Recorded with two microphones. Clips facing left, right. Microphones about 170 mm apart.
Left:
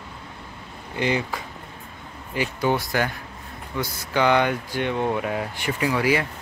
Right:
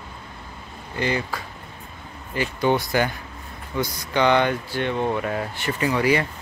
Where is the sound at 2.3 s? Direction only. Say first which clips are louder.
Right 2 dB; 5° left (ahead or behind).